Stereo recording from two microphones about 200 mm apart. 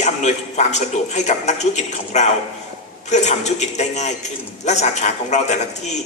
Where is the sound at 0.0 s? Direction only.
35° left (ahead or behind).